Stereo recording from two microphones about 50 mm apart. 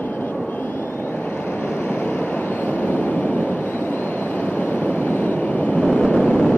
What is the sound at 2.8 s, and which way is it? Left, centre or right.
Vehicle, left.